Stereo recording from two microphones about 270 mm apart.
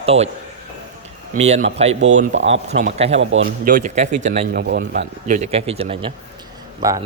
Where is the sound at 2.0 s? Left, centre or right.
Right.